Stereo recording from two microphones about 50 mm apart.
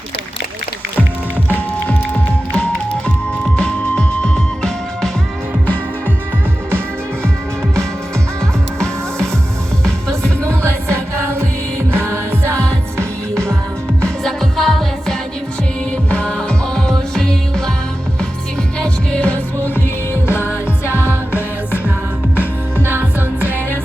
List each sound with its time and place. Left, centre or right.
1.5 s music: left; by 5.1 s centre
8.4 s music: centre
11.9 s music: right
13.3 s music: centre
16.0 s music: left
19.1 s music: left
20.2 s music: left
21.0 s music: left
22.8 s music: right